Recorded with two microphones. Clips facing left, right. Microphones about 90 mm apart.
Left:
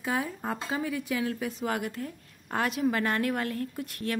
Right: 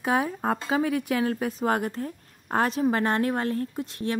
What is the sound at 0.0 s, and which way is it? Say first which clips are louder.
Speech: right 6 dB; 60° right (ahead or behind).